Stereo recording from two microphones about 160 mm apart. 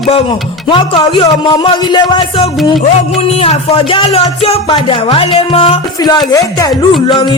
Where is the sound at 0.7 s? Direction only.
30° left (ahead or behind).